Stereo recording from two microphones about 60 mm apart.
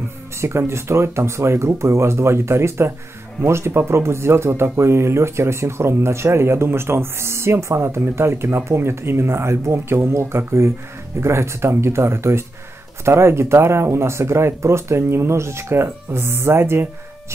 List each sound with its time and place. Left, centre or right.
0.4 s speech: right